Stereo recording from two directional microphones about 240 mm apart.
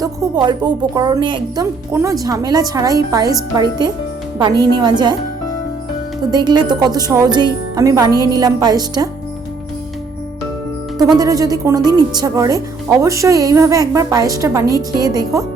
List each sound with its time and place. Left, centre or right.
0.0 s speech: centre
6.3 s speech: centre
10.9 s speech: centre